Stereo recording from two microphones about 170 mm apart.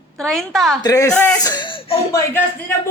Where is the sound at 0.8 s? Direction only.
20° left (ahead or behind).